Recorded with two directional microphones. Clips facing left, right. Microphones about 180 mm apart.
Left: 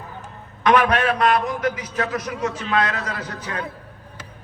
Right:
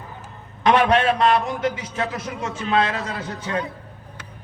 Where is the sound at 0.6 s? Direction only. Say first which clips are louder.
Right 1 dB; 25° right (ahead or behind).